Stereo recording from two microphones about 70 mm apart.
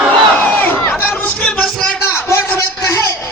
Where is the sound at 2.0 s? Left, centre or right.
Left.